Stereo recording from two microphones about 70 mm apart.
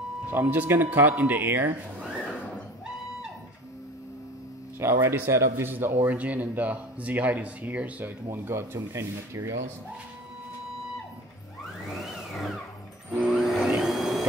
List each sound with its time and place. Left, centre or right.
0.3 s speech: right
5.0 s speech: right
6.1 s speech: right
8.3 s speech: right
12.0 s vehicle: centre
13.3 s vacuum cleaner: centre